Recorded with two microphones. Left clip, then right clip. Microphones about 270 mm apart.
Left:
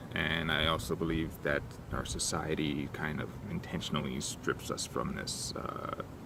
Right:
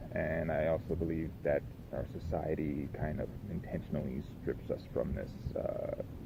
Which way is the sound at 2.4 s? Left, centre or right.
Left.